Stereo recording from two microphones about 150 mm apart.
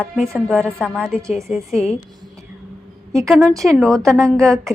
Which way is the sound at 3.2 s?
5° right (ahead or behind).